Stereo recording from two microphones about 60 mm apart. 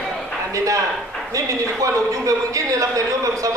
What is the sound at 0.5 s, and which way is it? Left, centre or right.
A man's voice, right.